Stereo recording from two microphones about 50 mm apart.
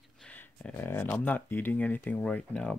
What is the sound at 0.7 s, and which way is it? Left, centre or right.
Speech, left.